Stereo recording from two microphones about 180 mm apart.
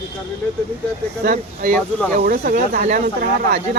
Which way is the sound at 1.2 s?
55° right (ahead or behind).